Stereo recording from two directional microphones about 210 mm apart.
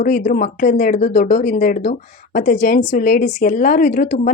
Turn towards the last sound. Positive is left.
turn(degrees=40)  # may be behind; listen again after turning